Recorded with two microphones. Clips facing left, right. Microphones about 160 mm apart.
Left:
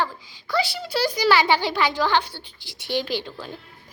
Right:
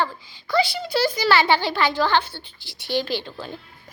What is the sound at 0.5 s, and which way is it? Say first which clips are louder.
A child's voice: right 3 dB; 10° left (ahead or behind).